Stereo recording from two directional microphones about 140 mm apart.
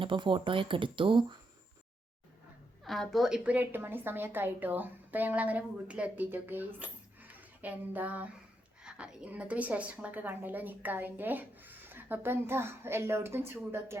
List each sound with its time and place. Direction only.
0.0 s speech: 35° right (ahead or behind)
2.8 s a woman's voice: centre (ahead or behind); by 6.7 s 15° right (ahead or behind)
6.7 s a sound: 10° right (ahead or behind)
8.8 s a woman's voice: 5° right (ahead or behind)